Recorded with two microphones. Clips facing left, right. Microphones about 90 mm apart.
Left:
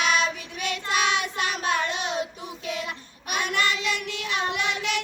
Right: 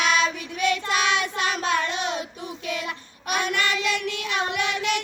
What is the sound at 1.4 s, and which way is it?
Child singing, 65° right (ahead or behind).